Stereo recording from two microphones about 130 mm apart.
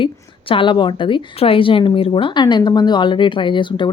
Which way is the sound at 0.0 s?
40° left (ahead or behind).